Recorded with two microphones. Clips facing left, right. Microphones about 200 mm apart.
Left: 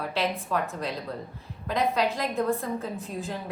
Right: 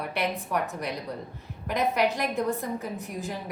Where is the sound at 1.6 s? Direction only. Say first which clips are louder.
Even; 15° right (ahead or behind).